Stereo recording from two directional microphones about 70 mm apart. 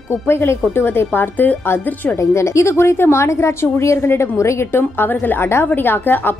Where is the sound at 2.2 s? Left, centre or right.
Left.